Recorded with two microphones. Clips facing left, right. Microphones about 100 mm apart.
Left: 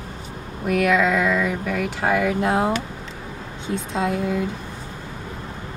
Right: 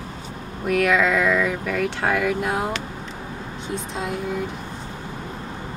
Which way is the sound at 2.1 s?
25° left (ahead or behind).